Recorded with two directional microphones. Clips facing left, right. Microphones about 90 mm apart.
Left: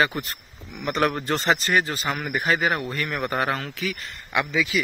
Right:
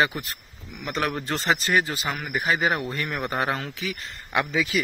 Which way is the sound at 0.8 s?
Centre (ahead or behind).